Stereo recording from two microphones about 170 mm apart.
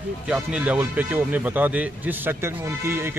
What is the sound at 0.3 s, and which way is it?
A man's voice, 5° right (ahead or behind).